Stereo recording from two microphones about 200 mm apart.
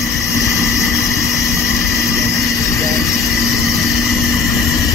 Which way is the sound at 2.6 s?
15° left (ahead or behind).